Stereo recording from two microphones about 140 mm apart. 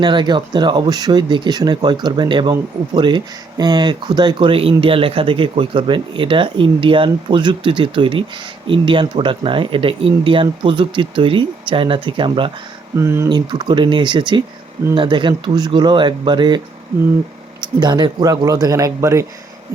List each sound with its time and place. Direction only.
0.0 s speech: 35° right (ahead or behind)
13.0 s a man's voice: 20° right (ahead or behind)
13.2 s speech: 30° right (ahead or behind)
17.6 s a man's voice: 30° right (ahead or behind)